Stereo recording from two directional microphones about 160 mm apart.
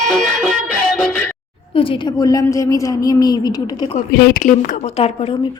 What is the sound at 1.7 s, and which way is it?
A woman's voice, 35° left (ahead or behind).